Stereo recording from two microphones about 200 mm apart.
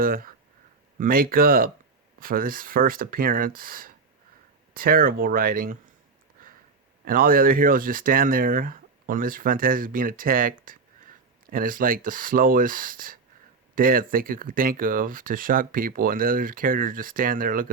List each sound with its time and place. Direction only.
0.0 s speech: 45° right (ahead or behind)
7.0 s speech: 45° right (ahead or behind)